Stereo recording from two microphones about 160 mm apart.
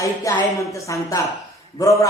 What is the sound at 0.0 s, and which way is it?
A woman's voice, 20° left (ahead or behind).